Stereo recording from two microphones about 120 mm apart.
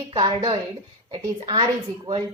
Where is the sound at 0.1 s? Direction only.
45° right (ahead or behind).